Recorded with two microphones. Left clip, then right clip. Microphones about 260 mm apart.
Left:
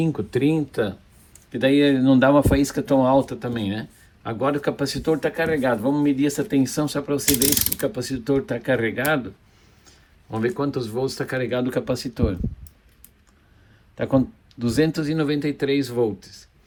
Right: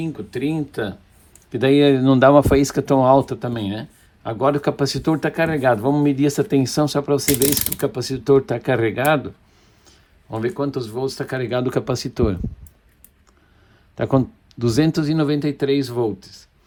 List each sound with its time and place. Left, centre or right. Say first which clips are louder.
0.0 s speech: left 3 dB; centre
1.5 s speech: right 3 dB; centre
10.3 s speech: right 1 dB; centre; by 12.4 s right
14.5 s speech: right 3 dB; right